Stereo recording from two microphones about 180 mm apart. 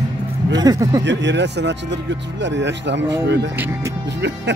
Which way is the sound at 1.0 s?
80° right.